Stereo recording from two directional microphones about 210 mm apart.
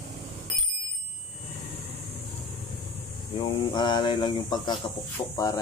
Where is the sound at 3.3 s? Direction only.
20° left (ahead or behind).